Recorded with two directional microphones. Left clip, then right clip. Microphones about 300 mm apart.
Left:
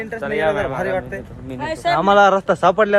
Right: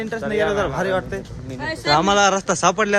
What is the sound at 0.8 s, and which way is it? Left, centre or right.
Speech, centre.